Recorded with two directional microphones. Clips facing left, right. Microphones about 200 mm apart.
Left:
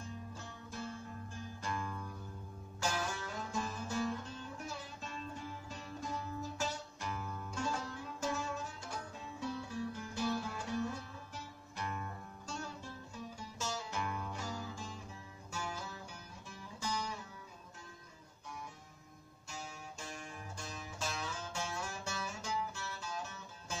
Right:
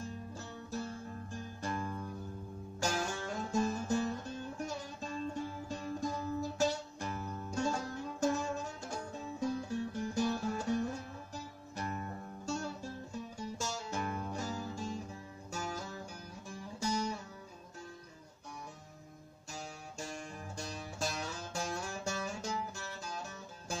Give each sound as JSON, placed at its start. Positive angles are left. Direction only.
{"t": 0.3, "sound": "music", "side_deg": -40}
{"t": 19.5, "sound": "music", "side_deg": -45}